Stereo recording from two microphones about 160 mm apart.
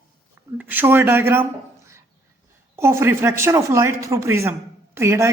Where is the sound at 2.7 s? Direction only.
15° right (ahead or behind).